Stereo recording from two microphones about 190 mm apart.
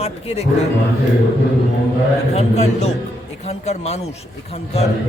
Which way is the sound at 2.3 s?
35° left (ahead or behind).